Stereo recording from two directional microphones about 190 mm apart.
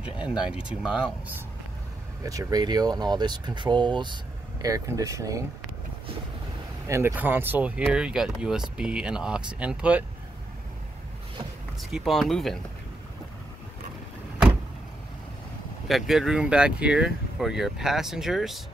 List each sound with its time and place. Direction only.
0.0 s speech: 5° right (ahead or behind)
2.2 s speech: 20° right (ahead or behind)
6.9 s speech: 15° right (ahead or behind)
11.8 s speech: centre (ahead or behind)
15.9 s speech: centre (ahead or behind)